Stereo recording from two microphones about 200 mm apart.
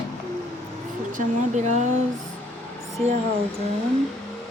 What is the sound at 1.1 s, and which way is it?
Speech, 40° right (ahead or behind).